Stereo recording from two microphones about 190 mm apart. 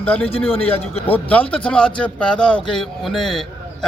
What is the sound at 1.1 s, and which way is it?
A man's voice, 5° left (ahead or behind).